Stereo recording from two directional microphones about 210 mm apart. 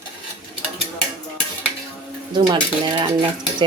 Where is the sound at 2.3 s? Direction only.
20° right (ahead or behind).